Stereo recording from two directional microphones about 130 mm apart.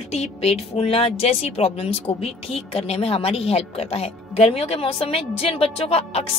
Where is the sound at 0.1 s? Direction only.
55° left (ahead or behind).